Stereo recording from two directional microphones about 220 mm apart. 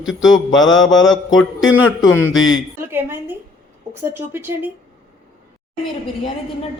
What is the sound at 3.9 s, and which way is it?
Speech, 10° right (ahead or behind).